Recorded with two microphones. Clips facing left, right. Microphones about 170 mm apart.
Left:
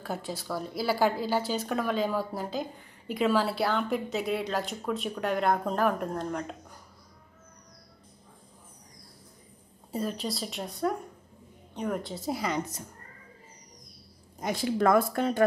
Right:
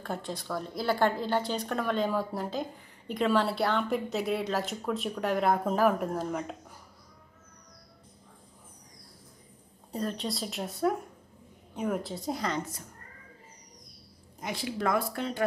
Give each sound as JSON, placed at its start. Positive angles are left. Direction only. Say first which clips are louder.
{"t": 0.0, "sound": "a woman's voice", "louder": "left 1 dB", "side_deg": 5}
{"t": 9.9, "sound": "a woman's voice", "louder": "left 1 dB", "side_deg": 5}
{"t": 14.4, "sound": "speech", "louder": "left 6 dB", "side_deg": 45}